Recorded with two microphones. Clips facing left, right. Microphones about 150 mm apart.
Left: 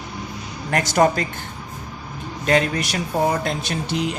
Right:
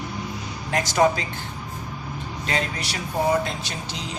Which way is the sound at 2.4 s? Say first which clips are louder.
Left 9 dB; 50° left (ahead or behind).